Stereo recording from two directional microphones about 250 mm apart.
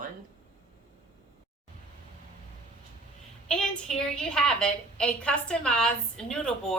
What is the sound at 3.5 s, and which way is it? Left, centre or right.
A woman's voice, centre.